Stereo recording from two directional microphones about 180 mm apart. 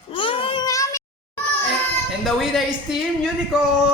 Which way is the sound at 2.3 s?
Centre (ahead or behind).